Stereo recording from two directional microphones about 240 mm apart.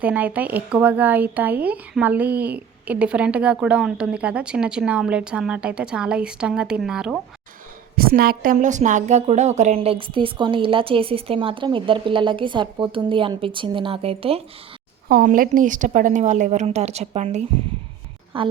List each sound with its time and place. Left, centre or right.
0.0 s speech: centre
7.9 s a woman's voice: right
15.1 s a woman's voice: right